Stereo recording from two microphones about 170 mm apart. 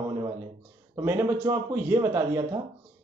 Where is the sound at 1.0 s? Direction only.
15° right (ahead or behind).